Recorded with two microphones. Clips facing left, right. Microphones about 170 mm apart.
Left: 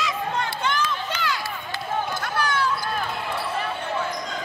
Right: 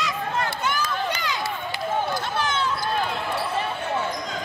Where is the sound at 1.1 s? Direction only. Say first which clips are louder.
Even; 15° right (ahead or behind).